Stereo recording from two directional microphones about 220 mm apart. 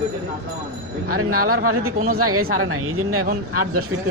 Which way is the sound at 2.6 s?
75° right (ahead or behind).